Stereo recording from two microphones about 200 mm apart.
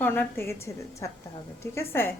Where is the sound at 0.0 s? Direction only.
10° left (ahead or behind).